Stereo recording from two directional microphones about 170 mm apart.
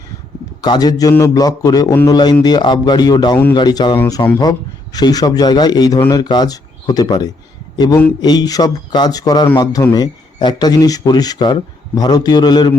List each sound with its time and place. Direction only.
0.6 s speech: 25° left (ahead or behind)